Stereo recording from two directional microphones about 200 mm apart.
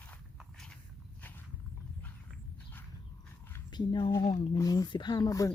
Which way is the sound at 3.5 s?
20° left (ahead or behind).